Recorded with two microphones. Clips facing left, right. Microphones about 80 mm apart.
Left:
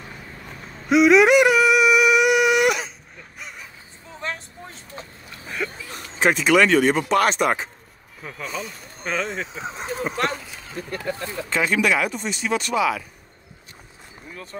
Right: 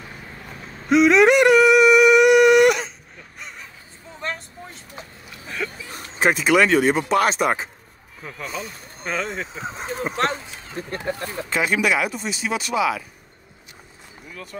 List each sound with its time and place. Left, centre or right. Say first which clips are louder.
0.8 s a sound: even; centre
4.2 s vehicle: right 1 dB; centre
5.9 s speech: even; centre
10.1 s speech: right 2 dB; right
11.5 s speech: even; centre
14.3 s speech: even; left